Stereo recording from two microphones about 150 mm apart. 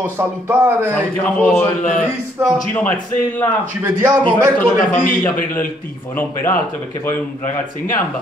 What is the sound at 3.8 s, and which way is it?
Speech, 15° right (ahead or behind).